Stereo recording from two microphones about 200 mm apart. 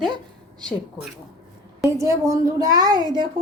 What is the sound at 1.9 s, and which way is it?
A woman's voice, 15° right (ahead or behind).